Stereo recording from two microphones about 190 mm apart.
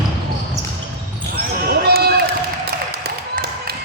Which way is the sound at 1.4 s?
55° right (ahead or behind).